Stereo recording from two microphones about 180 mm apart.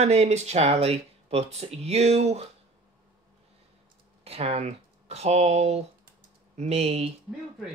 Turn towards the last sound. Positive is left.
turn(degrees=-35)  # may be behind; listen again after turning